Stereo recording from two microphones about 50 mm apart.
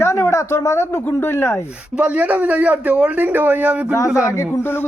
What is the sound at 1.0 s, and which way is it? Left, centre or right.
Speech, left.